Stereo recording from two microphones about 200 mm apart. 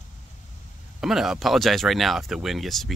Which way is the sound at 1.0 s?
Centre (ahead or behind).